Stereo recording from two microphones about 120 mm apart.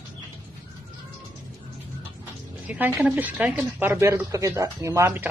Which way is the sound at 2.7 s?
20° right (ahead or behind).